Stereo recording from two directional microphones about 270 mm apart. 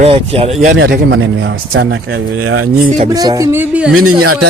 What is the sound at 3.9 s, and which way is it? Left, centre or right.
Speech, right.